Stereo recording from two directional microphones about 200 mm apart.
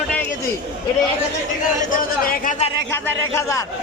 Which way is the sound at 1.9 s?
45° left (ahead or behind).